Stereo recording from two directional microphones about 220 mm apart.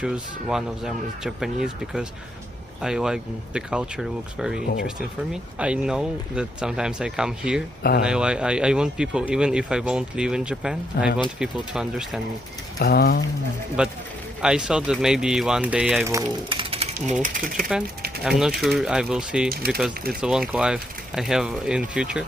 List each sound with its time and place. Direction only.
0.0 s speech: 5° right (ahead or behind)
12.8 s speech: 45° left (ahead or behind)
13.8 s speech: 5° right (ahead or behind); by 17.2 s 25° right (ahead or behind)
18.2 s speech: centre (ahead or behind)
19.5 s speech: 45° right (ahead or behind)
19.8 s speech: 5° right (ahead or behind)